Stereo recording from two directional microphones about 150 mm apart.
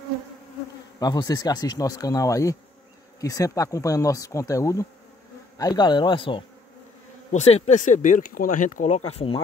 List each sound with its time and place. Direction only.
0.9 s insect: 25° left (ahead or behind)
5.6 s speech: 25° left (ahead or behind)
7.3 s speech: 45° left (ahead or behind)